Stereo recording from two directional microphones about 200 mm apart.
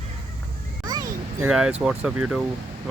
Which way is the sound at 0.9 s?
20° right (ahead or behind).